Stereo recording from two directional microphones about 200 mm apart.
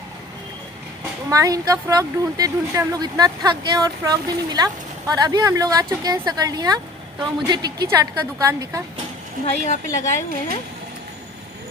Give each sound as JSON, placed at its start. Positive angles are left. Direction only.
{"t": 1.3, "sound": "a woman's voice", "side_deg": -15}
{"t": 9.6, "sound": "speech", "side_deg": 35}